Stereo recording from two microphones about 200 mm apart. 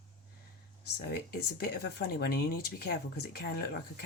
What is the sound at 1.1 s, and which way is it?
Speech, 50° left (ahead or behind).